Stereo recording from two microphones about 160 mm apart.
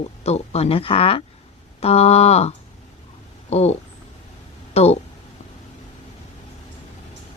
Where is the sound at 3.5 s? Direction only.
40° left (ahead or behind).